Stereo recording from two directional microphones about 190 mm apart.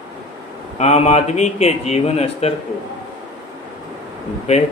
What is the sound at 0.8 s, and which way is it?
A man's voice, 35° left (ahead or behind).